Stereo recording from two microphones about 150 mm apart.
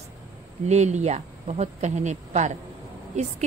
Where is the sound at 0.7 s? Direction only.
50° right (ahead or behind).